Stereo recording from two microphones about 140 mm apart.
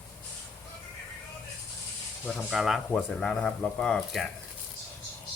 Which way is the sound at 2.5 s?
Centre (ahead or behind).